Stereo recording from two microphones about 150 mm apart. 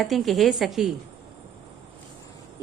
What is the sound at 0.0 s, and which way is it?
Speech, centre (ahead or behind).